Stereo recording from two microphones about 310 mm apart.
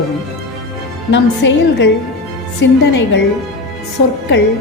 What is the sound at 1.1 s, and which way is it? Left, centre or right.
A woman's voice, left.